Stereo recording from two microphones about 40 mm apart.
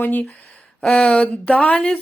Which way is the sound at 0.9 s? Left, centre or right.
Left.